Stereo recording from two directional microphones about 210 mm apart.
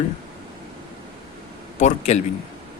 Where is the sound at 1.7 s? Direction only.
35° left (ahead or behind).